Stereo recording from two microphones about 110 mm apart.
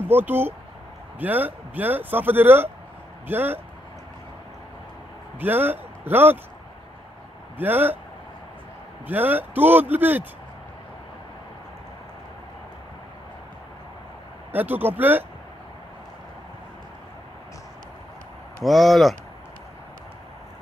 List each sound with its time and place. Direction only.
0.1 s speech: 20° right (ahead or behind)
5.4 s speech: 15° right (ahead or behind)
7.5 s speech: 15° right (ahead or behind)
9.0 s speech: 15° right (ahead or behind)
14.5 s speech: 15° right (ahead or behind)
18.6 s speech: centre (ahead or behind)